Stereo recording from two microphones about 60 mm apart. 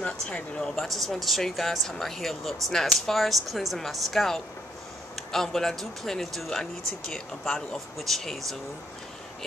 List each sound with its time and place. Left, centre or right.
0.0 s speech: centre
0.7 s speech: centre